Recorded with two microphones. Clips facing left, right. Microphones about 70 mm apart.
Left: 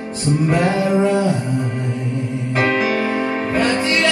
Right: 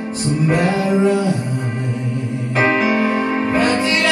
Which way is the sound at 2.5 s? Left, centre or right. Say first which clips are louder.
Right 2 dB; centre.